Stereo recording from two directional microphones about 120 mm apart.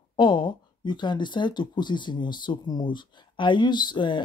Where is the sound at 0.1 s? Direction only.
40° left (ahead or behind).